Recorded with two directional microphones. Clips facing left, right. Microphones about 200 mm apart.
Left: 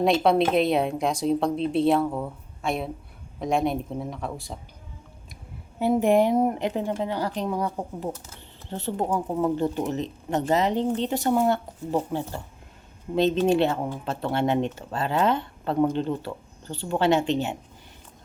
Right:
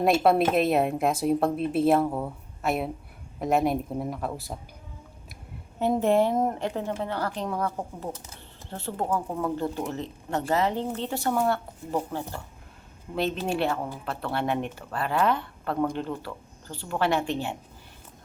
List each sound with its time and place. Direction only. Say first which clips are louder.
0.0 s a woman's voice: left 1 dB; 5° right (ahead or behind)
5.8 s a woman's voice: left 2 dB; 10° left (ahead or behind)